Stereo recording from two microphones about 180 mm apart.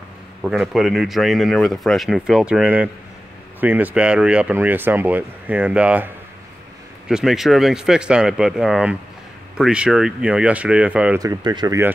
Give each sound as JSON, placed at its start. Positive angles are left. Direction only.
{"t": 0.4, "sound": "speech", "side_deg": -5}
{"t": 11.1, "sound": "speech", "side_deg": -20}